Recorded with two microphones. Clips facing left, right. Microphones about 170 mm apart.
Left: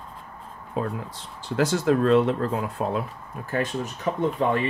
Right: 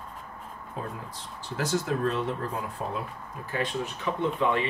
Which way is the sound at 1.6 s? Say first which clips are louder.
Left 6 dB; 75° left (ahead or behind).